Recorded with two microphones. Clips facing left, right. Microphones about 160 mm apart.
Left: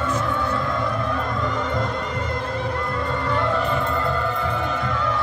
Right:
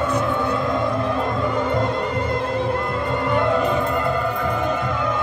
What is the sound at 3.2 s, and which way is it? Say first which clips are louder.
Music: right 5 dB; 20° right (ahead or behind).